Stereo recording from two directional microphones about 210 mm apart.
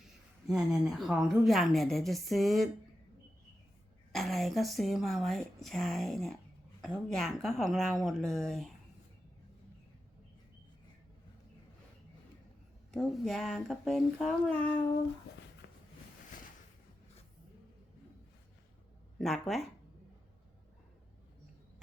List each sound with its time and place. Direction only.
0.0 s speech: centre (ahead or behind)
4.1 s speech: centre (ahead or behind)
12.9 s speech: centre (ahead or behind)
15.6 s a sound: 55° left (ahead or behind)
19.2 s speech: centre (ahead or behind)